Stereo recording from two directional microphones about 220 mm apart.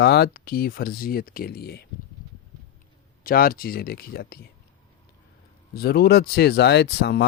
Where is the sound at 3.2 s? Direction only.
40° left (ahead or behind).